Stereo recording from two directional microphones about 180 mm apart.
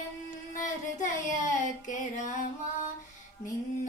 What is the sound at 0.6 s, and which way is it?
Child singing, 45° left (ahead or behind).